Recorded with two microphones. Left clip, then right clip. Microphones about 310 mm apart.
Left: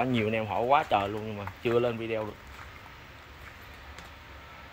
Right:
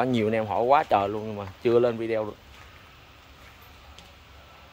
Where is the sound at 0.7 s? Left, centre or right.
Centre.